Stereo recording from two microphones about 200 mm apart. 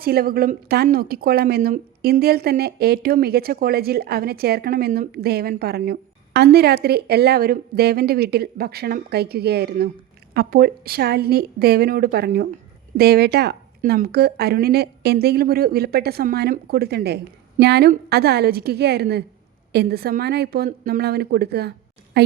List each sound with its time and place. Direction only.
0.0 s a woman's voice: 50° right (ahead or behind)